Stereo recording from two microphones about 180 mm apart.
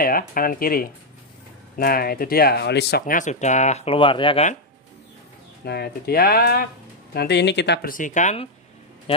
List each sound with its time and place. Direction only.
0.0 s speech: 55° left (ahead or behind)
3.1 s speech: 45° left (ahead or behind); by 4.5 s 30° left (ahead or behind)
5.7 s speech: 60° left (ahead or behind)
7.2 s speech: 70° left (ahead or behind)
7.9 s speech: 45° left (ahead or behind)